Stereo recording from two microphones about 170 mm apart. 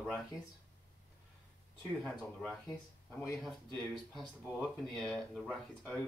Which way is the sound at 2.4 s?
5° left (ahead or behind).